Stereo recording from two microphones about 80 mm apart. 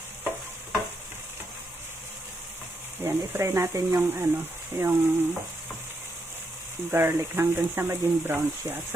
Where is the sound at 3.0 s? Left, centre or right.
Right.